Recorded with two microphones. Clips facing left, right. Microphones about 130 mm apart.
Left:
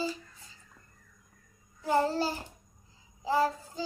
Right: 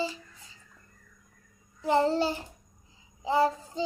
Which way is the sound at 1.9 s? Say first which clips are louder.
Right 3 dB; 20° right (ahead or behind).